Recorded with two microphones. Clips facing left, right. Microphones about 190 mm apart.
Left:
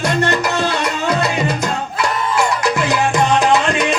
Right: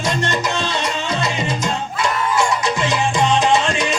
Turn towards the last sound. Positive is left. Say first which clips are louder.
# left 2 dB
turn(degrees=60)  # may be behind; listen again after turning